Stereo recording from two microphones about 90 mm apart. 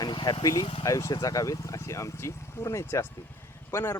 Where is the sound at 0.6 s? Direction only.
60° left (ahead or behind).